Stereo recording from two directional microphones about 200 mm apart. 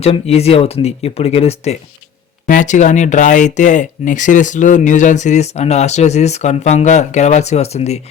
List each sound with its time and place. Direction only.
0.0 s speech: 30° left (ahead or behind)